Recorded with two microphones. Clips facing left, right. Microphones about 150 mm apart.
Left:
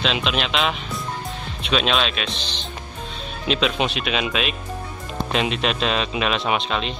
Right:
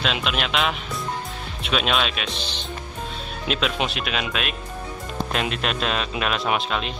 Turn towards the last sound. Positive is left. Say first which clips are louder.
# left 1 dB
turn(degrees=-5)  # may be behind; listen again after turning